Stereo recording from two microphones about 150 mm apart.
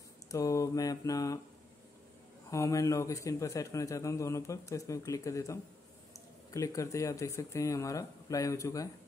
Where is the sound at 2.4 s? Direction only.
20° left (ahead or behind).